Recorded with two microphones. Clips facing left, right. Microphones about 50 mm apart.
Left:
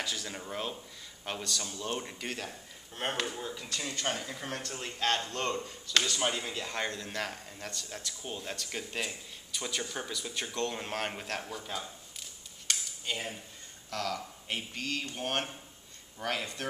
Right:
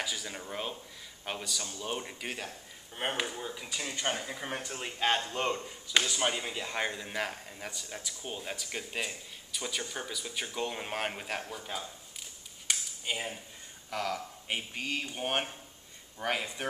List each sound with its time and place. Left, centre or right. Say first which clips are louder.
0.0 s speech: even; centre
12.2 s a sound: even; centre
13.8 s speech: right 1 dB; centre